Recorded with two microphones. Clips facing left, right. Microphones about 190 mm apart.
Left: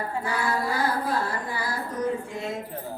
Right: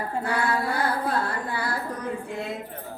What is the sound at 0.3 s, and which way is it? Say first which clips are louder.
Female singing: right 1 dB; 60° right (ahead or behind).